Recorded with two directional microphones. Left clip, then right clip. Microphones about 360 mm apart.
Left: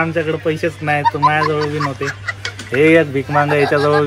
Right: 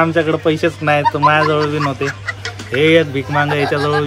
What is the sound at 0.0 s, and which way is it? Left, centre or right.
Speech, centre.